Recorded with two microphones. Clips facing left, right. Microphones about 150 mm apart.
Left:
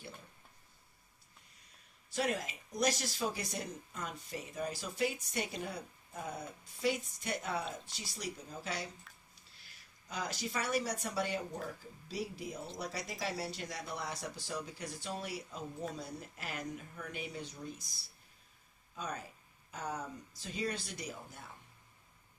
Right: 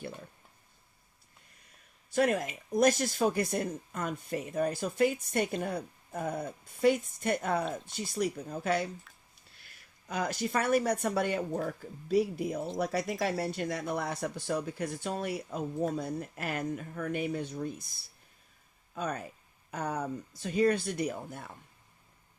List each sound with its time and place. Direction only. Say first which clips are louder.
2.0 s speech: right 8 dB; 55° right (ahead or behind)
10.1 s speech: right 8 dB; 55° right (ahead or behind)